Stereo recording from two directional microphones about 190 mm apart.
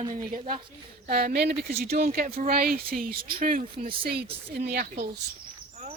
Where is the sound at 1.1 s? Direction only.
55° right (ahead or behind).